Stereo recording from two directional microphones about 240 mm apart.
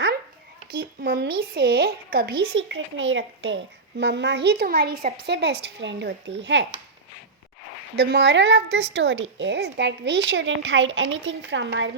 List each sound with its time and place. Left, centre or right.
1.0 s speech: right
2.5 s a woman's voice: right
7.9 s a woman's voice: right